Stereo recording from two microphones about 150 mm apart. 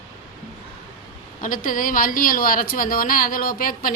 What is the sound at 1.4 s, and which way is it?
A woman's voice, 65° left (ahead or behind).